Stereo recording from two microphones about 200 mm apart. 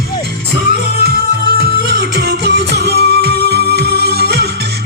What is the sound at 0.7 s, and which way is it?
Music, 50° right (ahead or behind).